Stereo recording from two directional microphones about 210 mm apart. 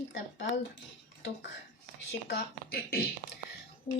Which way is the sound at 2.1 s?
50° left (ahead or behind).